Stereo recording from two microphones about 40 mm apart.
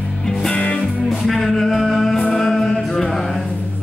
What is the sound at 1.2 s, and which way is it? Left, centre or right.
Music, centre.